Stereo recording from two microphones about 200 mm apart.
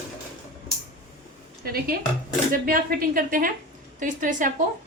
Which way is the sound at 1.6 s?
50° right (ahead or behind).